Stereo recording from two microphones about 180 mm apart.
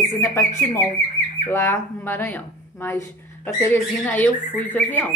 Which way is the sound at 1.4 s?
15° left (ahead or behind).